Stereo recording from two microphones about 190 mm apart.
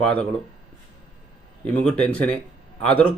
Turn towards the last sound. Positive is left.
turn(degrees=10)  # may be behind; listen again after turning